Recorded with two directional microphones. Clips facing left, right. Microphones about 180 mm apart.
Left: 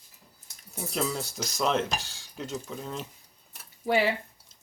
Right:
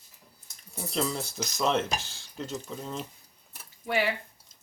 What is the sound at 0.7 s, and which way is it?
Speech, 5° left (ahead or behind).